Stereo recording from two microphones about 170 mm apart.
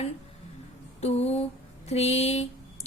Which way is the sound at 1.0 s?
40° left (ahead or behind).